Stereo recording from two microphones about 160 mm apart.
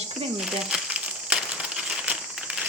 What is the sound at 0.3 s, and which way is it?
Crumpling, 5° right (ahead or behind).